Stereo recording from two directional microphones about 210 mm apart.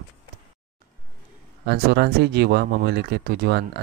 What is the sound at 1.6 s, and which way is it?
Speech, 50° right (ahead or behind).